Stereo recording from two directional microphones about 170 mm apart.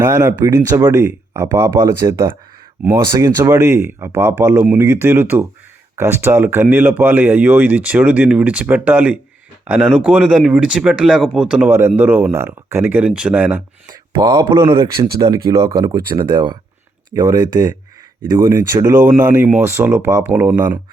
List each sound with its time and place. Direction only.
0.0 s speech: 15° right (ahead or behind)
13.8 s speech: 20° right (ahead or behind)
19.0 s speech: 10° right (ahead or behind)